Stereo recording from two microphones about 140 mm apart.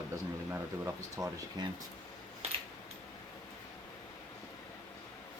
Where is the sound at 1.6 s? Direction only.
30° right (ahead or behind).